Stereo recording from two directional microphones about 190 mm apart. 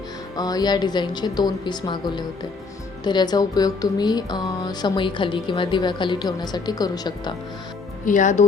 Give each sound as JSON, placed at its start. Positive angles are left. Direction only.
{"t": 0.3, "sound": "speech", "side_deg": 20}
{"t": 8.0, "sound": "speech", "side_deg": 40}